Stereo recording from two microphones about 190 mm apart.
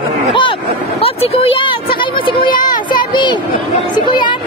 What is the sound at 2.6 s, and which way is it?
Child singing, 25° left (ahead or behind).